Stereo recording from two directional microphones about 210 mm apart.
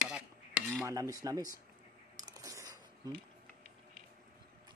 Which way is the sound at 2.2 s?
15° right (ahead or behind).